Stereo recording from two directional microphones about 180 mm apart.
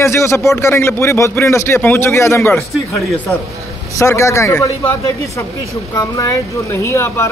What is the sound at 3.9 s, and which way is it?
A man's voice, 15° left (ahead or behind).